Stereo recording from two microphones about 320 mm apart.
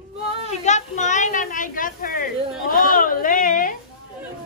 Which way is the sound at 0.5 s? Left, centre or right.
Left.